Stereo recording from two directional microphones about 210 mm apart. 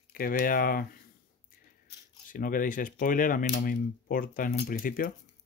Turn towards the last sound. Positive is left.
turn(degrees=40)  # may be behind; listen again after turning